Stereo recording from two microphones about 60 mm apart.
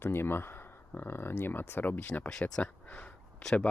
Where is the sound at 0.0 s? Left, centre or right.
Left.